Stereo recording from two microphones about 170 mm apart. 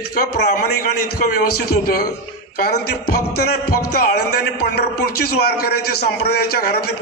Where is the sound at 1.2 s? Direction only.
60° left (ahead or behind).